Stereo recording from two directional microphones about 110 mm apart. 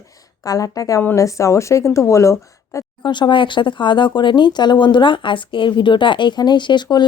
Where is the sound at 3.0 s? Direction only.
45° left (ahead or behind).